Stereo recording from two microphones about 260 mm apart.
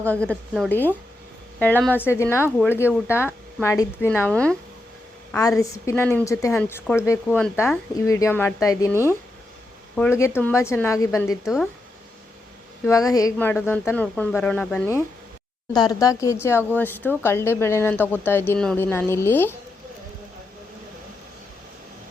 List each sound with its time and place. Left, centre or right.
0.0 s a woman's voice: centre
11.4 s a woman's voice: centre
12.8 s speech: centre